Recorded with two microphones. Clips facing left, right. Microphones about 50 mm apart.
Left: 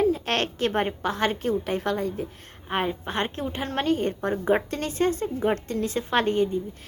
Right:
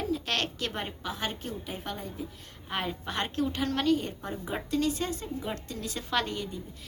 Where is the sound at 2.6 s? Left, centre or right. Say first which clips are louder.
Left 6 dB; left.